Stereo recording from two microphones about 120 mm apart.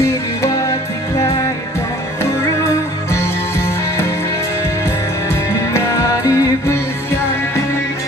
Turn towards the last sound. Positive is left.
turn(degrees=25)  # may be behind; listen again after turning